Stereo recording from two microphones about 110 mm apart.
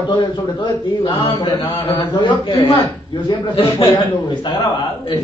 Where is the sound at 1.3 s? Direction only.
35° left (ahead or behind).